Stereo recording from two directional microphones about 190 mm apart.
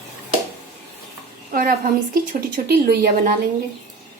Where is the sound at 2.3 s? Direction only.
50° right (ahead or behind).